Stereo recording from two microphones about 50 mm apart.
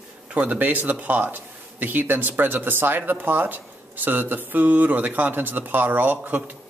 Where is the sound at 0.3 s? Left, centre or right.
Right.